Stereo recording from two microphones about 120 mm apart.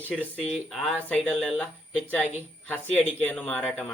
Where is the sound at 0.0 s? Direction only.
10° left (ahead or behind).